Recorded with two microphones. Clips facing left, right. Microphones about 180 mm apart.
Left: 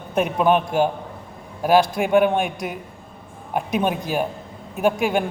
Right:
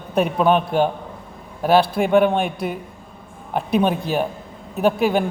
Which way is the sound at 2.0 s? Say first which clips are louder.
Right 1 dB; 10° left (ahead or behind).